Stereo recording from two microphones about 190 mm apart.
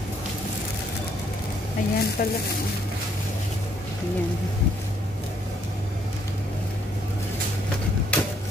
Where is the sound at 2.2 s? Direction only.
50° left (ahead or behind).